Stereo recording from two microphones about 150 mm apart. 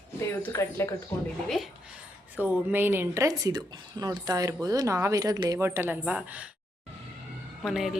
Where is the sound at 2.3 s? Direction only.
10° right (ahead or behind).